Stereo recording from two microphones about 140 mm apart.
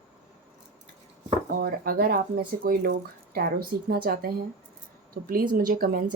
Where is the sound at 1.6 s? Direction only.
90° right.